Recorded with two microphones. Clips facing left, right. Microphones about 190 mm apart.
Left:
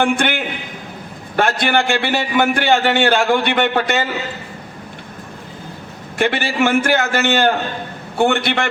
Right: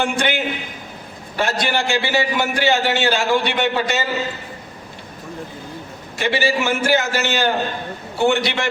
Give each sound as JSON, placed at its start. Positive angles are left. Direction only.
{"t": 0.0, "sound": "a man's voice", "side_deg": 55}
{"t": 6.1, "sound": "a man's voice", "side_deg": 55}